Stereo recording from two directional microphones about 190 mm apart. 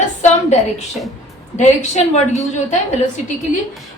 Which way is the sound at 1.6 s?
35° left (ahead or behind).